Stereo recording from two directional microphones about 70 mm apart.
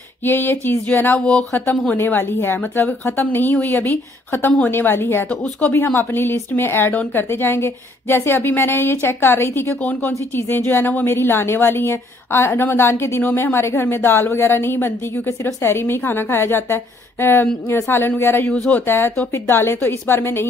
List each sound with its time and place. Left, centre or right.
0.2 s a woman's voice: left
5.3 s speech: centre
5.9 s a woman's voice: left
18.5 s speech: centre
18.9 s a woman's voice: left